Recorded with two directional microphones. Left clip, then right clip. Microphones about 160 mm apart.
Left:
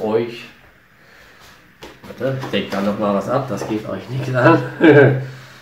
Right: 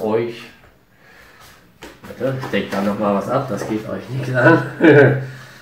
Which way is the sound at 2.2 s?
25° left (ahead or behind).